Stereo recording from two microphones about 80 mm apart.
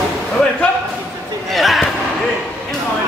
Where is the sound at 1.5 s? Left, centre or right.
Centre.